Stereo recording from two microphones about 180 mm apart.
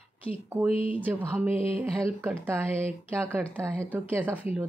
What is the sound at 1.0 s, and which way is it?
Speech, 10° right (ahead or behind).